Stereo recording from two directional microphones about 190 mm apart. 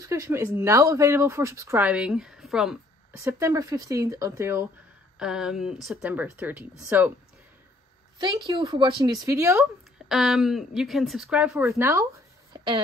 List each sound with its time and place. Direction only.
0.0 s speech: 15° right (ahead or behind)
3.3 s speech: 15° right (ahead or behind)
5.2 s a woman's voice: 5° right (ahead or behind)
8.5 s speech: 25° right (ahead or behind)
9.6 s a woman's voice: centre (ahead or behind)
11.5 s speech: 15° right (ahead or behind)